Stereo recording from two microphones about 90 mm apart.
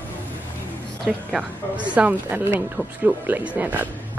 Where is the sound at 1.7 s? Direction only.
15° right (ahead or behind).